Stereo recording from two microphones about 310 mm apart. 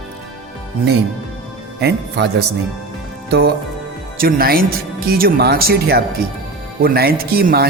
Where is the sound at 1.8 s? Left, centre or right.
Right.